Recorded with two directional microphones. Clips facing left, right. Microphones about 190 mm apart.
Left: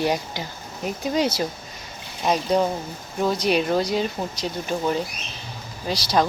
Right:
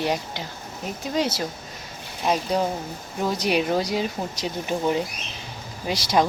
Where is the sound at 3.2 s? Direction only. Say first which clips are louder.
Left 2 dB; 10° right (ahead or behind).